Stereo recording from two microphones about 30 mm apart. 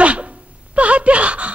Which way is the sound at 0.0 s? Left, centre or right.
Right.